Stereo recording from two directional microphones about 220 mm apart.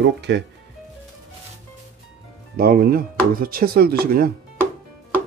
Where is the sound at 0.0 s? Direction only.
50° right (ahead or behind).